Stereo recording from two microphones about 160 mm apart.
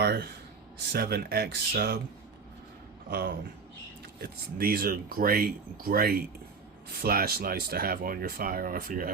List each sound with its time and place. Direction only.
0.0 s a sound: 90° right
0.9 s speech: 75° right (ahead or behind)
3.1 s speech: 90° right
4.2 s speech: 70° right (ahead or behind)